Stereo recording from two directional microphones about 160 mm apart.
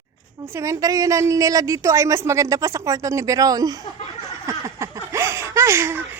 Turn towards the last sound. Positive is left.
turn(degrees=-15)  # may be behind; listen again after turning